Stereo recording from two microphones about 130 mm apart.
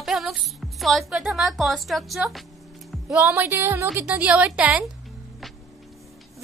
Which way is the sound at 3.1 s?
15° right (ahead or behind).